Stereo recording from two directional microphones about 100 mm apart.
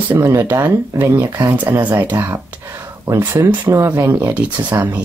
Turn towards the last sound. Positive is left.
turn(degrees=-20)  # may be behind; listen again after turning